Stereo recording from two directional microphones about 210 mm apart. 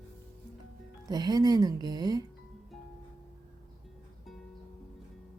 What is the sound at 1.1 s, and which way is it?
Speech, 20° right (ahead or behind).